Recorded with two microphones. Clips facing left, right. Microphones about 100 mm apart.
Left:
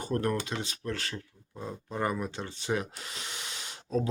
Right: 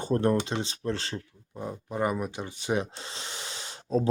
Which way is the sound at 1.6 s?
15° right (ahead or behind).